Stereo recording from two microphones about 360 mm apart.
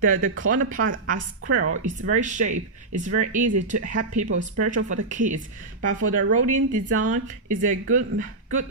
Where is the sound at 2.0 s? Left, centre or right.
Right.